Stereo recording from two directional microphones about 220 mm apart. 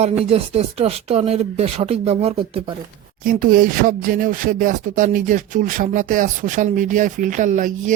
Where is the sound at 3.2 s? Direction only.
40° right (ahead or behind).